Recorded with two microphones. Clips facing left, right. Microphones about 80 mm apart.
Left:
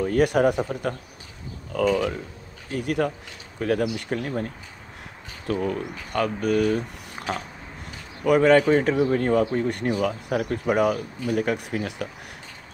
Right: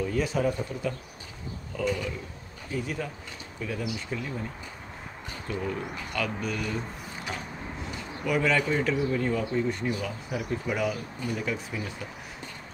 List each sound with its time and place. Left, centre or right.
0.0 s speech: left
5.5 s speech: left
7.8 s speech: left